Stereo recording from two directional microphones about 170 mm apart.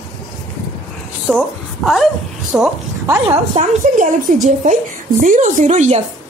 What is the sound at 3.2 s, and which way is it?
A woman's voice, 40° right (ahead or behind).